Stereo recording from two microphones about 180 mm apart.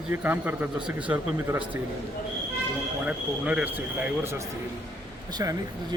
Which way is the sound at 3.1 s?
5° right (ahead or behind).